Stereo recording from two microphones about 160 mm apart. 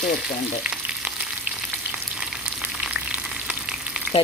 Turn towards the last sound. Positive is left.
turn(degrees=-5)  # may be behind; listen again after turning